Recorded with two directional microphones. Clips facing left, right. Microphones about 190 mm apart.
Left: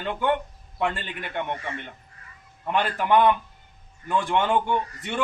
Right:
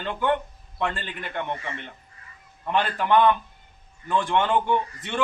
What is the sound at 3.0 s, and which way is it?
A man's voice, 10° left (ahead or behind).